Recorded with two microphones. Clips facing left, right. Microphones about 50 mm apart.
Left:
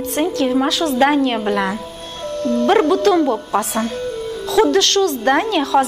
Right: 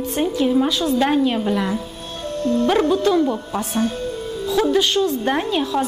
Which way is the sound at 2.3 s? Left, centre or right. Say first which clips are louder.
Left 1 dB; left.